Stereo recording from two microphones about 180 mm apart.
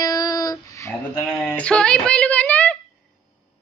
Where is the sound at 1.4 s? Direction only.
5° left (ahead or behind).